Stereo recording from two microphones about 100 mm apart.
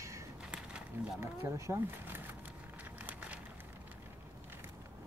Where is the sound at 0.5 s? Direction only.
10° right (ahead or behind).